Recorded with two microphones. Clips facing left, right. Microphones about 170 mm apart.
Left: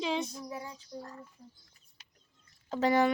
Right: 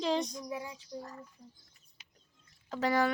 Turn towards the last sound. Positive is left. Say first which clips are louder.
# left 3 dB
turn(degrees=25)  # may be behind; listen again after turning